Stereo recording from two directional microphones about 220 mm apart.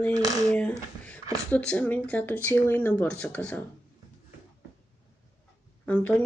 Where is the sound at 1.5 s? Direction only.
5° left (ahead or behind).